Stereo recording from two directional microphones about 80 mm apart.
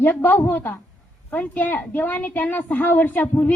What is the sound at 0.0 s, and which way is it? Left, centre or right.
A woman's voice, left.